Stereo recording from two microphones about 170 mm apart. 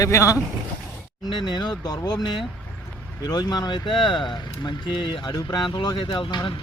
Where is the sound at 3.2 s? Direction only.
20° left (ahead or behind).